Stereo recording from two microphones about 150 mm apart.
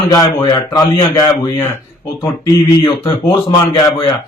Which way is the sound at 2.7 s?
30° left (ahead or behind).